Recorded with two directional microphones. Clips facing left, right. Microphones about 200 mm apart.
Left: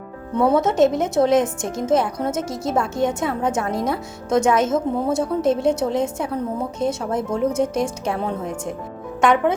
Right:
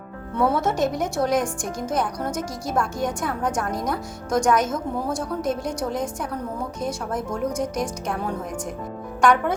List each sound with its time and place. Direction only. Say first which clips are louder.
0.3 s a woman's voice: left 5 dB; 20° left (ahead or behind)
9.2 s a woman's voice: left 2 dB; 20° left (ahead or behind)